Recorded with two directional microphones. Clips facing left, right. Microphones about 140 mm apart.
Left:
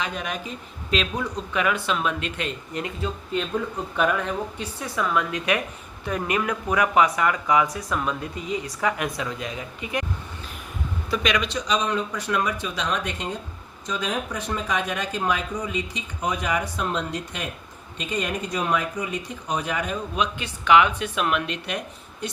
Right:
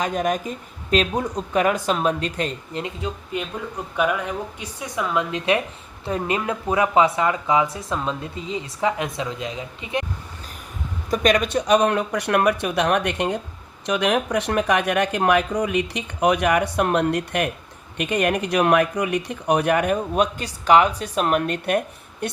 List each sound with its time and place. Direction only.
0.0 s speech: 45° right (ahead or behind)
2.8 s a woman's voice: 20° right (ahead or behind)
11.1 s speech: 45° right (ahead or behind)